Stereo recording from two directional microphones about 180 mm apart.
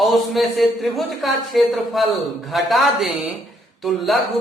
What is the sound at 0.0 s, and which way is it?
A man's voice, centre (ahead or behind).